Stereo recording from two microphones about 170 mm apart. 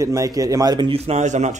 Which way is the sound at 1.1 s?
45° right (ahead or behind).